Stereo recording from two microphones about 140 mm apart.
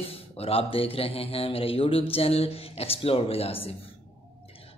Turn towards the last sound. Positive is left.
turn(degrees=45)  # may be behind; listen again after turning